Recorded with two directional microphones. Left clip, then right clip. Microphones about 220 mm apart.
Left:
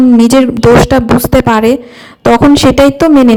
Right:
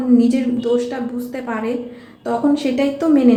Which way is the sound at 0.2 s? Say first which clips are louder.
Left 11 dB; 50° left (ahead or behind).